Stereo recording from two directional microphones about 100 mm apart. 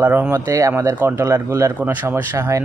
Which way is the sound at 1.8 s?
15° right (ahead or behind).